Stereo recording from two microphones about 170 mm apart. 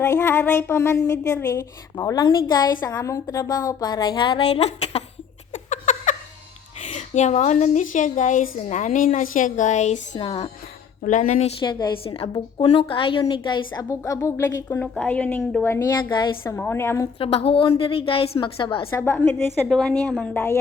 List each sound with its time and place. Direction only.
0.0 s a woman's voice: 15° left (ahead or behind); by 5.0 s 40° left (ahead or behind)
5.6 s laughter: 45° left (ahead or behind)
6.9 s a woman's voice: 45° left (ahead or behind)
10.2 s a woman's voice: 35° left (ahead or behind)
11.0 s a woman's voice: 50° left (ahead or behind); by 15.8 s 15° left (ahead or behind)
16.0 s a woman's voice: 25° left (ahead or behind)
16.4 s a woman's voice: 15° left (ahead or behind)
17.2 s a woman's voice: 35° left (ahead or behind)
18.9 s a woman's voice: 15° left (ahead or behind)